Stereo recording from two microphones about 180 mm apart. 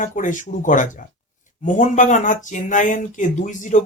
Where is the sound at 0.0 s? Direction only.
45° left (ahead or behind).